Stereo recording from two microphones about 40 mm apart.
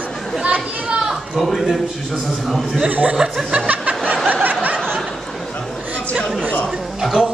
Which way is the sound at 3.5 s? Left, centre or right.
Right.